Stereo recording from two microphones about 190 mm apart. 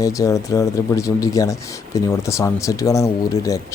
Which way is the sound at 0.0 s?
15° left (ahead or behind).